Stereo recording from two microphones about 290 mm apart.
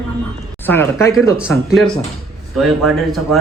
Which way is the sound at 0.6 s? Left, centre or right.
Centre.